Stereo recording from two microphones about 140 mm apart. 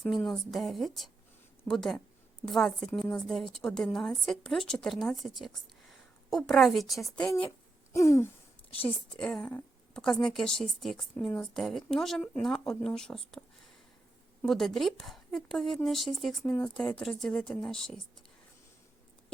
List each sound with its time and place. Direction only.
0.3 s a woman's voice: centre (ahead or behind)
7.9 s a sound: 20° left (ahead or behind)
9.1 s a woman's voice: 5° left (ahead or behind)
14.4 s a woman's voice: centre (ahead or behind)